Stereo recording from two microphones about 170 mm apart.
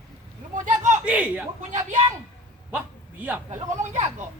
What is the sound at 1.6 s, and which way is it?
Speech, 45° right (ahead or behind).